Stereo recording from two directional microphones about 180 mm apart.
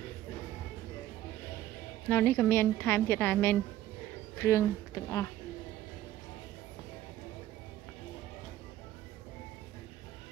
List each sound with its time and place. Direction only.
2.0 s a woman's voice: 10° left (ahead or behind)